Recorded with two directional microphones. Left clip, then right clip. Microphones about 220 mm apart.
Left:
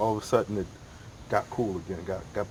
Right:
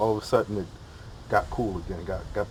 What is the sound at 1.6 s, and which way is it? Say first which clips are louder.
Speech: even; 20° left (ahead or behind).